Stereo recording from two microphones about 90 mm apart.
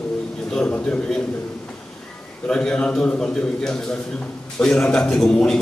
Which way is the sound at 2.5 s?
10° left (ahead or behind).